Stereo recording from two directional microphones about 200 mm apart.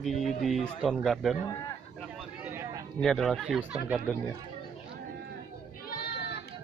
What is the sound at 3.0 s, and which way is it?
Speech, centre (ahead or behind).